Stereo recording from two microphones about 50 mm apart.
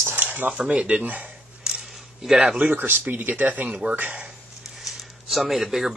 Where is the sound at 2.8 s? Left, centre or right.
Right.